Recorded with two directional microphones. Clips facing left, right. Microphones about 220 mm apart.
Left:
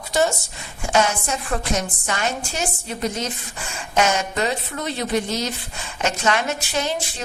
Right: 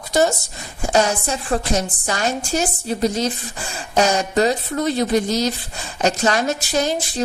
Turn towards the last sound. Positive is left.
turn(degrees=-40)  # may be behind; listen again after turning